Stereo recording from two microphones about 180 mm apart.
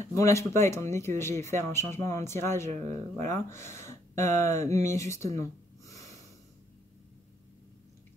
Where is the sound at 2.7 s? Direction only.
40° right (ahead or behind).